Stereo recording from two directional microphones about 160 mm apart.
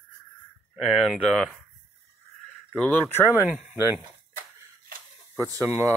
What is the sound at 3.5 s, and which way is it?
Speech, 10° right (ahead or behind).